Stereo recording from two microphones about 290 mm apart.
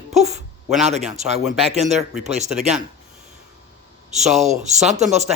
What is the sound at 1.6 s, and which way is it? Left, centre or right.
Speech, right.